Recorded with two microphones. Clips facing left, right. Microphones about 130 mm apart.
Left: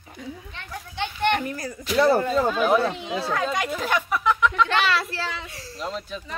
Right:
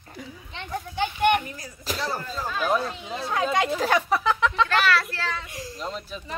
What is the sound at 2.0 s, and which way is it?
Speech, 60° left (ahead or behind).